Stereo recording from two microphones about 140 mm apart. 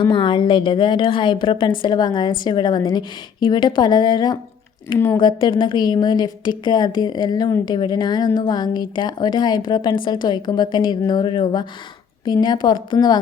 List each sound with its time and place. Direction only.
0.0 s a woman's voice: 35° left (ahead or behind)